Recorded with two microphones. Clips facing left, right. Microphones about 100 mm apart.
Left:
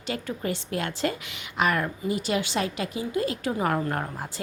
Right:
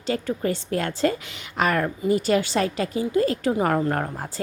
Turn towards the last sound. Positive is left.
turn(degrees=-35)  # may be behind; listen again after turning